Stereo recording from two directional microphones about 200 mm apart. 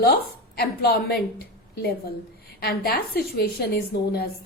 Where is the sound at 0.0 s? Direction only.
50° left (ahead or behind).